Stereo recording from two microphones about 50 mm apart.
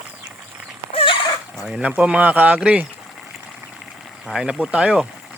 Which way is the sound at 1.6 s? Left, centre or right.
Right.